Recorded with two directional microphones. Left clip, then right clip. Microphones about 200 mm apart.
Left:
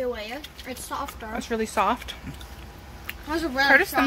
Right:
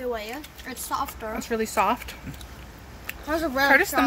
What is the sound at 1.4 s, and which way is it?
Speech, centre (ahead or behind).